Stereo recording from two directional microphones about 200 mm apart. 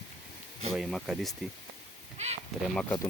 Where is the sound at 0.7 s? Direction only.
Centre (ahead or behind).